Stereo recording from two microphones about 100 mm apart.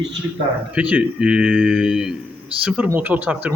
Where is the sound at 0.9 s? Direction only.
10° right (ahead or behind).